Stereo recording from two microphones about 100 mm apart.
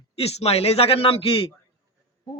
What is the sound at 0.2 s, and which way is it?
A man's voice, 90° left.